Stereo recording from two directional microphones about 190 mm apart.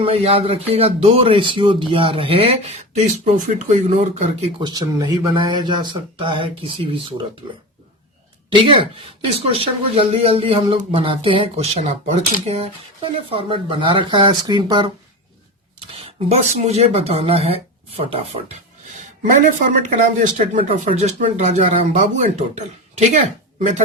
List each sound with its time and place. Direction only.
0.0 s speech: 30° right (ahead or behind)
4.6 s speech: 20° right (ahead or behind)
8.4 s speech: 25° right (ahead or behind)
16.0 s speech: 35° right (ahead or behind)
19.6 s speech: 40° right (ahead or behind)